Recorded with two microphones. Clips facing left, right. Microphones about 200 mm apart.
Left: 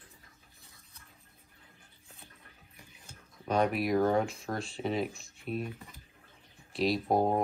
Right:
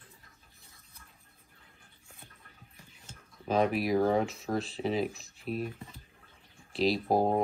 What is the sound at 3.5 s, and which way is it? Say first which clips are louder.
Speech: right 1 dB; centre (ahead or behind).